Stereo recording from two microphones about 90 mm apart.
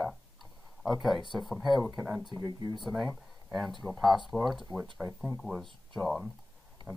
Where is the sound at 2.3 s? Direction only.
30° right (ahead or behind).